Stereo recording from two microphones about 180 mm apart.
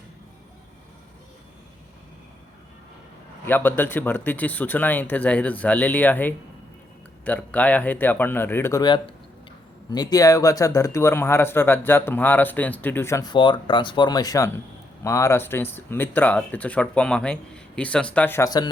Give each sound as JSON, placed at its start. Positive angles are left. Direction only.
{"t": 3.4, "sound": "speech", "side_deg": 10}
{"t": 8.8, "sound": "speech", "side_deg": 25}